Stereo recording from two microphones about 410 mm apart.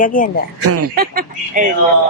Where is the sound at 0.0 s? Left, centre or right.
Centre.